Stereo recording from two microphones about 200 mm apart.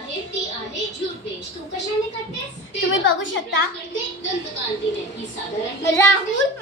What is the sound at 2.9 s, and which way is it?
Speech, 75° left (ahead or behind).